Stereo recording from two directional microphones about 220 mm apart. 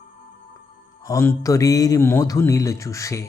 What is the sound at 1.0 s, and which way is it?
Speech, 10° left (ahead or behind).